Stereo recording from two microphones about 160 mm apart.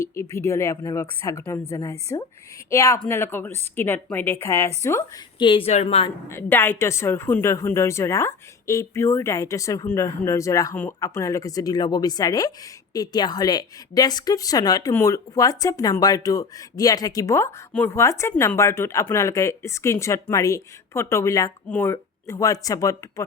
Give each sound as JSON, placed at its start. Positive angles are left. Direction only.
{"t": 0.3, "sound": "speech", "side_deg": 15}
{"t": 5.4, "sound": "speech", "side_deg": 35}
{"t": 6.2, "sound": "speech", "side_deg": 15}